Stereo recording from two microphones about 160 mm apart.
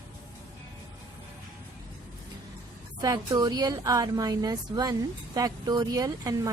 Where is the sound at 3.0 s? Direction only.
25° right (ahead or behind).